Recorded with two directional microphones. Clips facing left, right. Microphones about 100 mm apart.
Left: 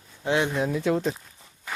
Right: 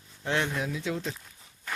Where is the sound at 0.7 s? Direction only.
55° left (ahead or behind).